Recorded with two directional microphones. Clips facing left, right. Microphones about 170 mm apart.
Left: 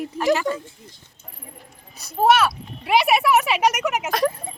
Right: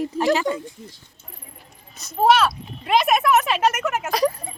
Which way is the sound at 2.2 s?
5° left (ahead or behind).